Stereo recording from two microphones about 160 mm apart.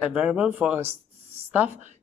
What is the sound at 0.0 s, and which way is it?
Speech, 5° right (ahead or behind).